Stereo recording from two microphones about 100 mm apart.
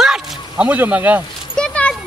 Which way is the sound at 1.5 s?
10° left (ahead or behind).